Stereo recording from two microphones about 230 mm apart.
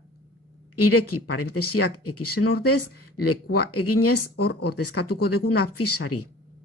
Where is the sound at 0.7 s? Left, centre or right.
Left.